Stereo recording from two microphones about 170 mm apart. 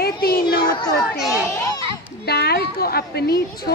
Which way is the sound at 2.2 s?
70° left (ahead or behind).